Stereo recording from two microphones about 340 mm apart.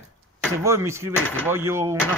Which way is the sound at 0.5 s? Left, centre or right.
Centre.